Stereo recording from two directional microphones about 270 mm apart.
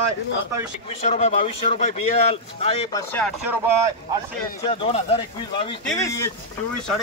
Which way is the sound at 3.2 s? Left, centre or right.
Centre.